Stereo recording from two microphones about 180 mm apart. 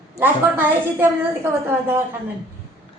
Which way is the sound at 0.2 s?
10° right (ahead or behind).